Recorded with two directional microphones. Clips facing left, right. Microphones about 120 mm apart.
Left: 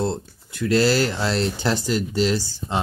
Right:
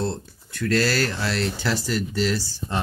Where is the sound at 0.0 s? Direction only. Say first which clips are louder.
Left 3 dB; 15° left (ahead or behind).